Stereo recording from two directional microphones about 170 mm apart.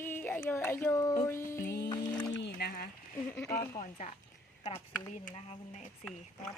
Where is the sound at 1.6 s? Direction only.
70° left (ahead or behind).